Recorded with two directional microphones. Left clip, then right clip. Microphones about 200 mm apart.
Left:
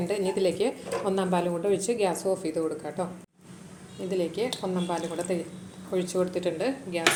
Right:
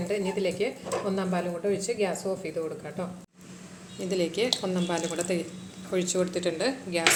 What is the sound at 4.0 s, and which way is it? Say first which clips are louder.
Speech: right 1 dB; centre (ahead or behind).